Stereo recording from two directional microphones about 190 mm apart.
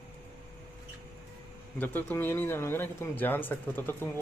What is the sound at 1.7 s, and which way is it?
A man's voice, 10° left (ahead or behind).